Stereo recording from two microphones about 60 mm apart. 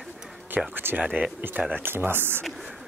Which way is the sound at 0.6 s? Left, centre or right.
Centre.